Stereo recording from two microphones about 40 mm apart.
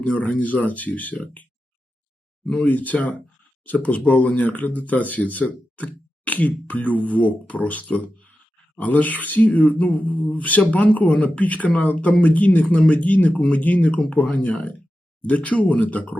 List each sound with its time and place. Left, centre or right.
0.0 s speech: left
2.6 s speech: left
14.3 s speech: left
15.2 s speech: left